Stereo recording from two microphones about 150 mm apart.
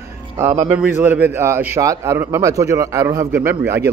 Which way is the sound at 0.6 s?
10° right (ahead or behind).